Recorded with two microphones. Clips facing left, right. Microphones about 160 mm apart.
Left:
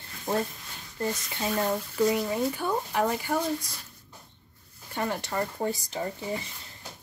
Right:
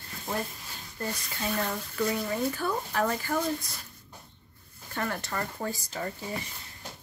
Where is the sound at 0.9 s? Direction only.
25° left (ahead or behind).